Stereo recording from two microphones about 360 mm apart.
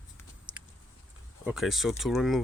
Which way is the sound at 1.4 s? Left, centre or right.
Centre.